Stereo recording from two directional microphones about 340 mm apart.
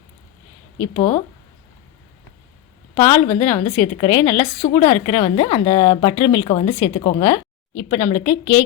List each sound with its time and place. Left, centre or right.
0.9 s a woman's voice: centre
2.9 s a woman's voice: centre
4.6 s a woman's voice: centre